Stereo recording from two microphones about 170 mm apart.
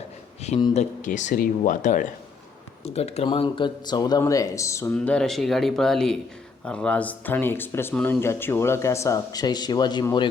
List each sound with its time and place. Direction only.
0.7 s speech: 45° left (ahead or behind)
2.8 s speech: 40° left (ahead or behind); by 4.9 s 15° left (ahead or behind)
4.9 s speech: 5° left (ahead or behind); by 10.2 s 25° left (ahead or behind)